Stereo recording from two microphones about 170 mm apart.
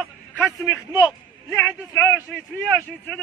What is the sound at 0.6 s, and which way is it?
A man's voice, 20° left (ahead or behind).